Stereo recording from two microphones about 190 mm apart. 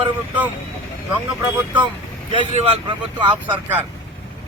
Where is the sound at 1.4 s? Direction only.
10° right (ahead or behind).